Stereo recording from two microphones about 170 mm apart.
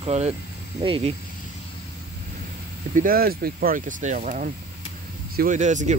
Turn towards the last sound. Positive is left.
turn(degrees=-45)  # may be behind; listen again after turning